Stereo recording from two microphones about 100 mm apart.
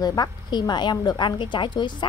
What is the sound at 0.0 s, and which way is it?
A woman's voice, 45° left (ahead or behind).